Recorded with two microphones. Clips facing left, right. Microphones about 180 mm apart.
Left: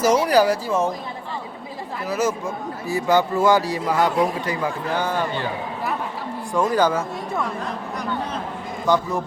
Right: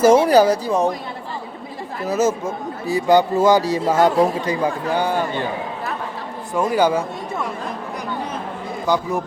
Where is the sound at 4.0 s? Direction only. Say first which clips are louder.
Right 4 dB; 45° right (ahead or behind).